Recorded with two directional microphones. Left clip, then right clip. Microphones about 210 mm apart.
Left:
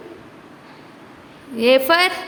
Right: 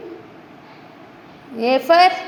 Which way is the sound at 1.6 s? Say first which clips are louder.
Right 1 dB; 20° left (ahead or behind).